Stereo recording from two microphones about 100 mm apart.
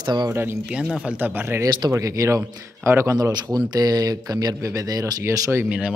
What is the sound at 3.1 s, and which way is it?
Speech, 40° right (ahead or behind).